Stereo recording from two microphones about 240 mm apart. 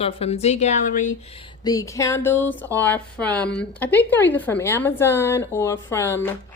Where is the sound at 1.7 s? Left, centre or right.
Centre.